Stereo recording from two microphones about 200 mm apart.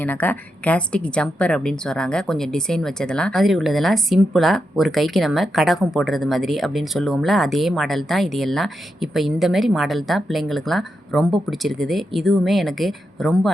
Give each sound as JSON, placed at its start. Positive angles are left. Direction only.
{"t": 0.0, "sound": "a woman's voice", "side_deg": 10}